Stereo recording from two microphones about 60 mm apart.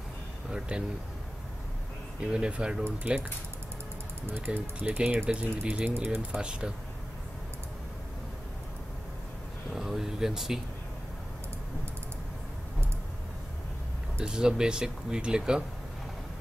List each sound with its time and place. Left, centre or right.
0.5 s speech: centre
2.1 s speech: centre
4.5 s speech: right
5.9 s speech: right
6.3 s speech: centre
9.8 s air conditioning: centre
14.2 s speech: centre